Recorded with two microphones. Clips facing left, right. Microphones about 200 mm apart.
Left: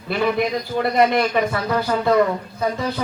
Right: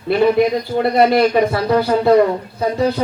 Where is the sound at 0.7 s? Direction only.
30° right (ahead or behind).